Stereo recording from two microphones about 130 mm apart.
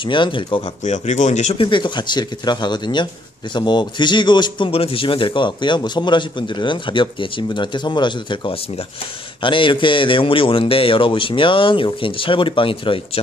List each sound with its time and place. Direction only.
0.0 s a man's voice: 40° left (ahead or behind)
0.8 s speech: 65° left (ahead or behind)
1.6 s a man's voice: 40° left (ahead or behind)